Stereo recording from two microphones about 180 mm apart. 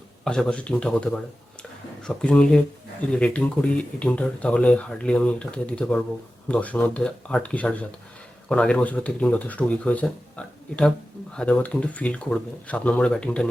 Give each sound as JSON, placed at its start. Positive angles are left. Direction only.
{"t": 0.3, "sound": "speech", "side_deg": 5}